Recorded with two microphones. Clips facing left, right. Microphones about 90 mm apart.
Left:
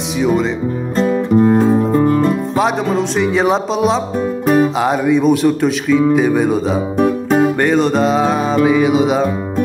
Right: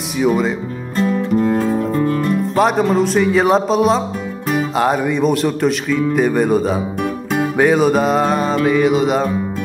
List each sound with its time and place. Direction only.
0.2 s speech: 5° right (ahead or behind)
0.9 s music: 25° left (ahead or behind)
2.5 s speech: centre (ahead or behind)
7.0 s music: 35° left (ahead or behind)
7.5 s speech: 5° right (ahead or behind)